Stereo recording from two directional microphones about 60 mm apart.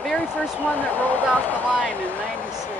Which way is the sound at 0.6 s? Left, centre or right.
Left.